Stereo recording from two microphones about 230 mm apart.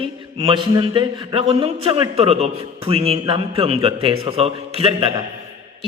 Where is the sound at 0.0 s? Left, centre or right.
Right.